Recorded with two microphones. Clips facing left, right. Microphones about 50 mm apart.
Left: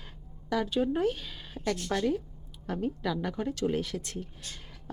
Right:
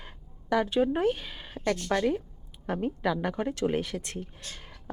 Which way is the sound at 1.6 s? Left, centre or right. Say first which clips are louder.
Right 3 dB; centre.